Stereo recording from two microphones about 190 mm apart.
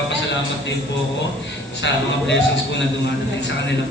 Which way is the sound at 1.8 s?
70° left (ahead or behind).